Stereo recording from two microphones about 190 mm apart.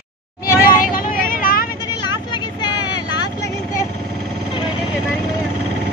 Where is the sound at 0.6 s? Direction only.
50° left (ahead or behind).